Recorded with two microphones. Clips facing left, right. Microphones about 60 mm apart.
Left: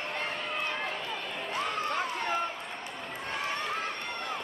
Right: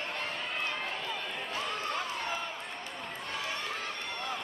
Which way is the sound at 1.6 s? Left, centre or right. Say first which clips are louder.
Left 4 dB; left.